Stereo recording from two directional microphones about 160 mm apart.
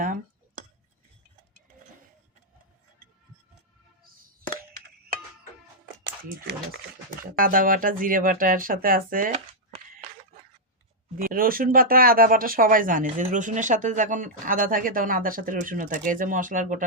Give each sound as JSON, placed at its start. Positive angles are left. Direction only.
{"t": 7.2, "sound": "speech", "side_deg": -60}
{"t": 11.2, "sound": "speech", "side_deg": -65}